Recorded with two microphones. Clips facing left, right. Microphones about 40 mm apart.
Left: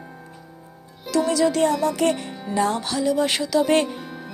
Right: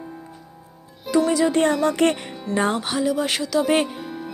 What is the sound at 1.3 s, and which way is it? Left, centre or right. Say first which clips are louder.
Music: even; centre.